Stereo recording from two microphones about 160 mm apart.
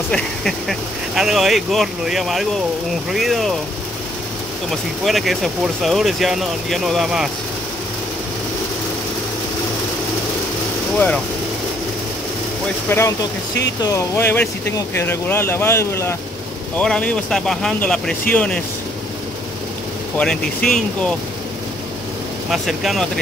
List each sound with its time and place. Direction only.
0.1 s speech: centre (ahead or behind)
4.6 s speech: centre (ahead or behind)
12.9 s speech: 15° left (ahead or behind)
20.2 s speech: 5° left (ahead or behind)
22.5 s speech: centre (ahead or behind)